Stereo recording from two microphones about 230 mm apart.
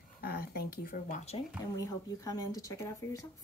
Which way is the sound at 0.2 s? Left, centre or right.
Left.